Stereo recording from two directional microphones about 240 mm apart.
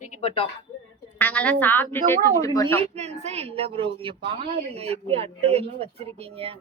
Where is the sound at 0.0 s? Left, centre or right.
Left.